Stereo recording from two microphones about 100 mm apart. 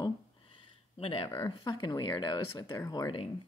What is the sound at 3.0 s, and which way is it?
Speech, 60° left (ahead or behind).